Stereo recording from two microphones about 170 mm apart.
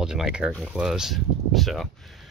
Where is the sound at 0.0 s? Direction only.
5° right (ahead or behind).